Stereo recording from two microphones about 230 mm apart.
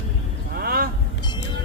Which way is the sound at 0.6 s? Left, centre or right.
Right.